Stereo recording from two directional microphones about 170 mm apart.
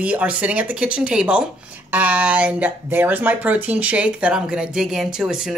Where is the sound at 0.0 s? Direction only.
10° right (ahead or behind).